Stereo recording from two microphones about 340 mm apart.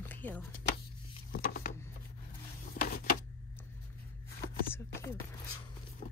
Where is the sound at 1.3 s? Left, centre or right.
Left.